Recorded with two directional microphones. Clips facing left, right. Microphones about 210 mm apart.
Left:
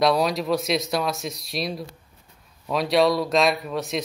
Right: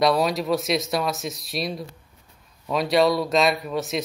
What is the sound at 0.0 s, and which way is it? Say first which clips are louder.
Speech: even; centre (ahead or behind).